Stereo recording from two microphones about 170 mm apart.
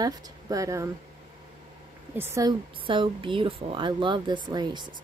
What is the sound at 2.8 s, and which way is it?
Speech, 30° right (ahead or behind).